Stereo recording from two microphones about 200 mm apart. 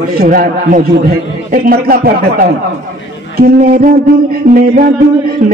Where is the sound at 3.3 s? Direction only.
45° right (ahead or behind).